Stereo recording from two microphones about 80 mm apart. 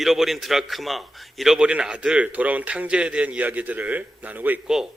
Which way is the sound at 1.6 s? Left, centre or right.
Centre.